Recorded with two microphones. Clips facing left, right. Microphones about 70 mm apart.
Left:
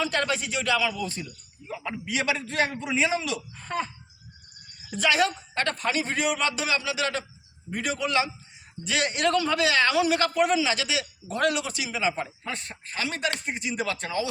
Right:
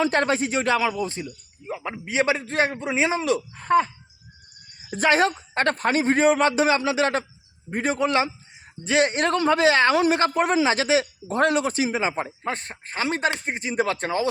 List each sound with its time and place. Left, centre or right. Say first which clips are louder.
0.0 s a man's voice: right 5 dB; right
3.5 s speech: right 11 dB; right
4.9 s a man's voice: right 4 dB; right